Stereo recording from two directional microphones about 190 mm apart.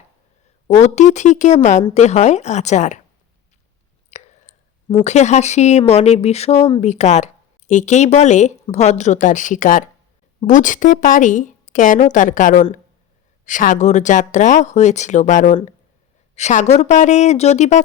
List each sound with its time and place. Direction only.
0.7 s speech: 40° left (ahead or behind)
4.1 s clicking: 35° left (ahead or behind)
5.0 s a woman's voice: 35° left (ahead or behind)